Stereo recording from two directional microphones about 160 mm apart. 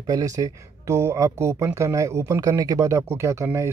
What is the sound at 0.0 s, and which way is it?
Speech, 20° right (ahead or behind).